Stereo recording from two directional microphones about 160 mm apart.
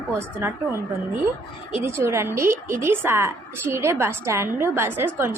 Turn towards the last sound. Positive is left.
turn(degrees=-15)  # may be behind; listen again after turning